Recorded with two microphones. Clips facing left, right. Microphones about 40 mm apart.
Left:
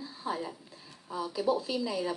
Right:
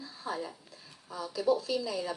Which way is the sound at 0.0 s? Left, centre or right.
Centre.